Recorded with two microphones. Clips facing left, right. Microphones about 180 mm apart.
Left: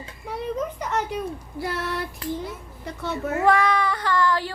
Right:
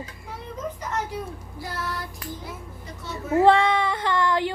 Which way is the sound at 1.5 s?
65° left (ahead or behind).